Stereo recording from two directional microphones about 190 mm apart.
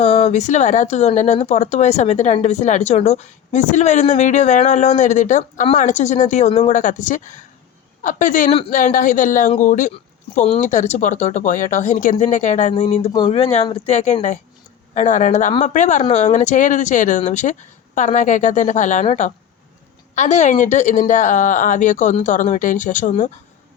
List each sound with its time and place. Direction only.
0.0 s speech: 35° left (ahead or behind)